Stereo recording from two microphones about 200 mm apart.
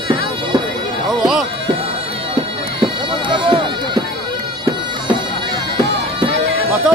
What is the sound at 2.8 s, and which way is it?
Bagpipes, 25° right (ahead or behind).